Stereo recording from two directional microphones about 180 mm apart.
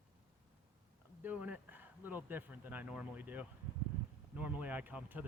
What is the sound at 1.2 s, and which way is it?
Speech, 10° right (ahead or behind).